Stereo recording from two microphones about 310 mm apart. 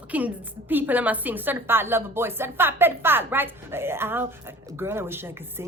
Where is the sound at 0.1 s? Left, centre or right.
Centre.